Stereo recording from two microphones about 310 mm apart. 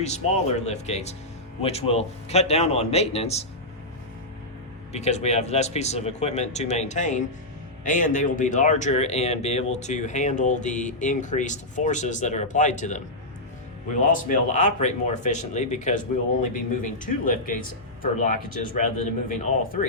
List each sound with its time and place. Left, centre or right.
0.0 s speech: left
4.9 s speech: left